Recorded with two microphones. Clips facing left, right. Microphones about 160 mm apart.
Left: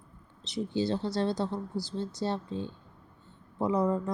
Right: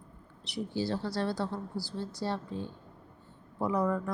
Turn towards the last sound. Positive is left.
turn(degrees=20)  # may be behind; listen again after turning